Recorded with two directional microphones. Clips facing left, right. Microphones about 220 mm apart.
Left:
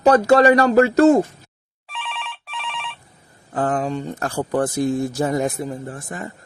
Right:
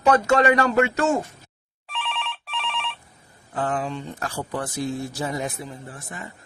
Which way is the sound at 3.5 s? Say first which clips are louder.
Left 5 dB; 45° left (ahead or behind).